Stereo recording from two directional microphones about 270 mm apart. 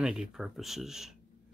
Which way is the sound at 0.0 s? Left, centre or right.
Centre.